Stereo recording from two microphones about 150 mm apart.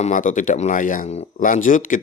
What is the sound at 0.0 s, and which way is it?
Speech, 60° left (ahead or behind).